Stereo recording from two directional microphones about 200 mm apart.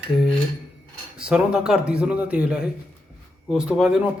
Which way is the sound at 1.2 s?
5° right (ahead or behind).